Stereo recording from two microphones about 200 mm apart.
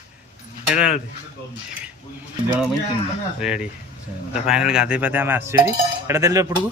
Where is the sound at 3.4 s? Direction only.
5° right (ahead or behind).